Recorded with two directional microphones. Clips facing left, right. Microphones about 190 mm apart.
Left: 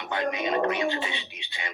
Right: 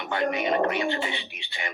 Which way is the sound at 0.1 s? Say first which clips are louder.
Right 2 dB; 20° left (ahead or behind).